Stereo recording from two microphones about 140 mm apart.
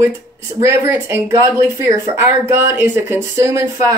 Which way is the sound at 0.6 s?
20° right (ahead or behind).